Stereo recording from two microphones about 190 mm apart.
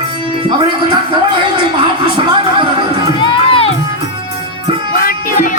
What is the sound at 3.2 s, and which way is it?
Music, 25° left (ahead or behind).